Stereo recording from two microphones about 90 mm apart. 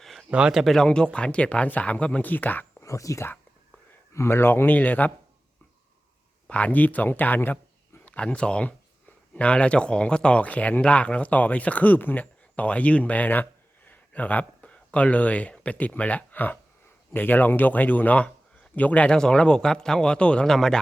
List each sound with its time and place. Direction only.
0.0 s a sound: centre (ahead or behind)
0.3 s speech: 10° right (ahead or behind)
0.9 s speech: 10° left (ahead or behind)
2.8 s speech: 35° left (ahead or behind); by 5.1 s 20° left (ahead or behind)
6.5 s speech: 15° left (ahead or behind)